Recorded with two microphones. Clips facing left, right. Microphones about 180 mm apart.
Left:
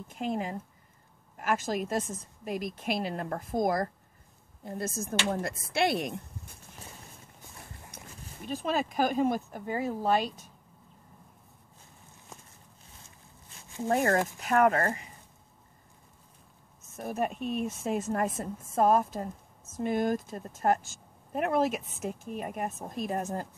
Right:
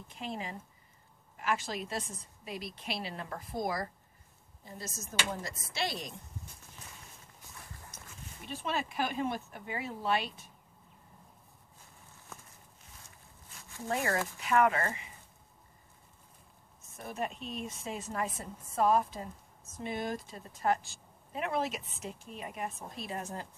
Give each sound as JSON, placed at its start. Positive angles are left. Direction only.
{"t": 0.1, "sound": "speech", "side_deg": 50}
{"t": 7.9, "sound": "dog", "side_deg": 60}
{"t": 8.5, "sound": "speech", "side_deg": 40}
{"t": 13.8, "sound": "speech", "side_deg": 50}
{"t": 16.9, "sound": "speech", "side_deg": 50}